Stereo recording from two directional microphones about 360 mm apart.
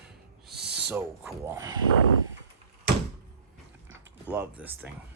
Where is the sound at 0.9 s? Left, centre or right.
Centre.